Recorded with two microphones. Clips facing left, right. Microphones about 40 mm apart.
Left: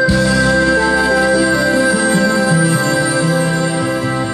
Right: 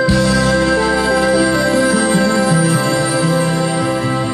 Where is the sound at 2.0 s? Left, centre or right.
Centre.